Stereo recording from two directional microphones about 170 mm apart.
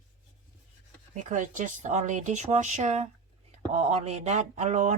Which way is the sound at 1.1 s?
45° right (ahead or behind).